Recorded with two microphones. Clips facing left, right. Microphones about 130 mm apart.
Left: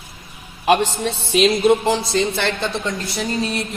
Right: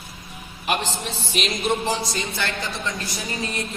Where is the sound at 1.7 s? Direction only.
65° left (ahead or behind).